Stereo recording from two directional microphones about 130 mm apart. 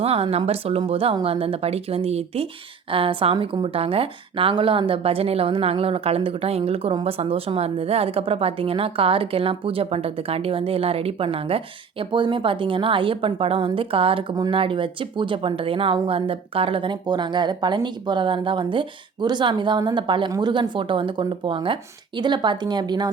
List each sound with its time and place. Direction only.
0.0 s a woman's voice: 50° right (ahead or behind); by 23.0 s 35° right (ahead or behind)